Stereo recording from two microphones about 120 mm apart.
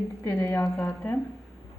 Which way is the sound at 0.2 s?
25° left (ahead or behind).